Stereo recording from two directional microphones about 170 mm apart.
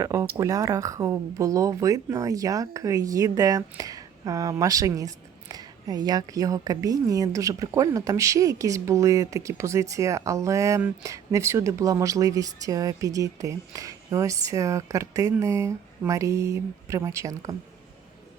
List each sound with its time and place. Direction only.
0.0 s speech: 15° right (ahead or behind)